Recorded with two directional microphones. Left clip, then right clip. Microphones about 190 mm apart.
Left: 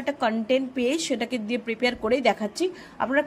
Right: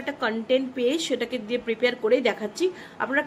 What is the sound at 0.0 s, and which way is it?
A woman's voice, 35° left (ahead or behind).